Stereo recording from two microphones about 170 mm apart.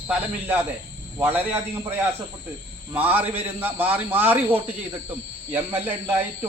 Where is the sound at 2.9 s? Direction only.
10° right (ahead or behind).